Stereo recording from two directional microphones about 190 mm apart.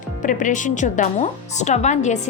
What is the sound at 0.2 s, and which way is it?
Speech, 45° left (ahead or behind).